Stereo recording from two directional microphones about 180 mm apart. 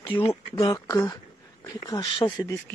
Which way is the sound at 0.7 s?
20° left (ahead or behind).